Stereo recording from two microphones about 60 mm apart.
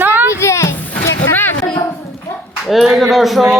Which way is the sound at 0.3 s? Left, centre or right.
Left.